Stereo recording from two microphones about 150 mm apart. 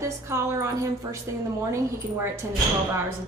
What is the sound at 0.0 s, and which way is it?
Speech, 20° right (ahead or behind).